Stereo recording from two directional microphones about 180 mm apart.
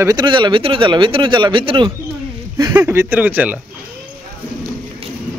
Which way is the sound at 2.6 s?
10° right (ahead or behind).